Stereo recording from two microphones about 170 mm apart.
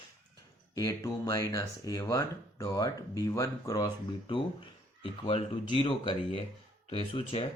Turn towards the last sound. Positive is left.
turn(degrees=35)  # may be behind; listen again after turning